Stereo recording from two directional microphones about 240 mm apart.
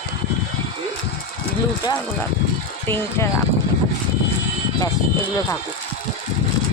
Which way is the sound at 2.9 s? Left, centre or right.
Centre.